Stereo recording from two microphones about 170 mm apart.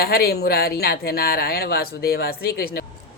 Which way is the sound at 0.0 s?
65° left (ahead or behind).